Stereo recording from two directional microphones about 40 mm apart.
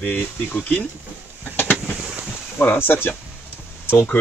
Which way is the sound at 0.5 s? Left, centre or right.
Left.